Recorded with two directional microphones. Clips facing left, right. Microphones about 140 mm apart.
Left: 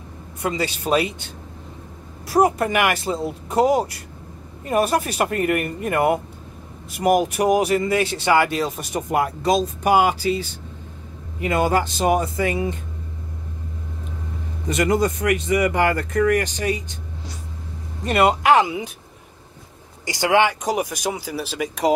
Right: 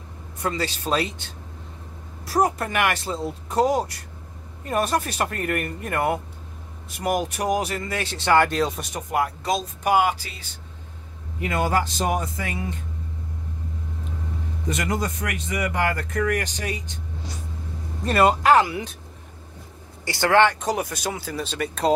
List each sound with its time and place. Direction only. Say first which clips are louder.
0.4 s speech: left 2 dB; 15° left (ahead or behind)
2.3 s speech: left 4 dB; 10° left (ahead or behind)
14.7 s speech: left 7 dB; 5° left (ahead or behind)
18.0 s speech: left 1 dB; 20° left (ahead or behind)
20.1 s speech: even; 15° left (ahead or behind)